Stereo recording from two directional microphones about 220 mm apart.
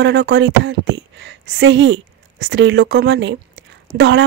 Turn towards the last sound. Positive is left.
turn(degrees=-55)  # may be behind; listen again after turning